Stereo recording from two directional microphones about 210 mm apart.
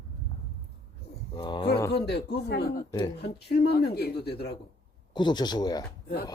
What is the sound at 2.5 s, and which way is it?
Speech, 45° left (ahead or behind).